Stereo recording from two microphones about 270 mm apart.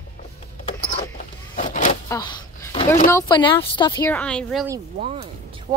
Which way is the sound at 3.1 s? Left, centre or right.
Centre.